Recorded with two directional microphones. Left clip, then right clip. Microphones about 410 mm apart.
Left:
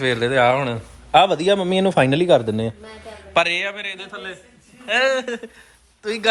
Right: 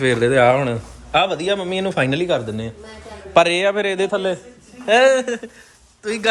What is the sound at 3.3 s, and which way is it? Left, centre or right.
A man's voice, centre.